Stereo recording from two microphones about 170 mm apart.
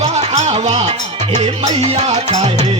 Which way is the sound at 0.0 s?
40° right (ahead or behind).